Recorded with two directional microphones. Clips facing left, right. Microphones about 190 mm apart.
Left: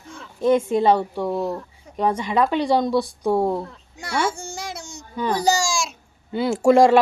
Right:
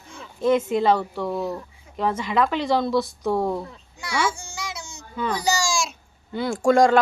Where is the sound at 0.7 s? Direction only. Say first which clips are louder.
Left 2 dB; 25° left (ahead or behind).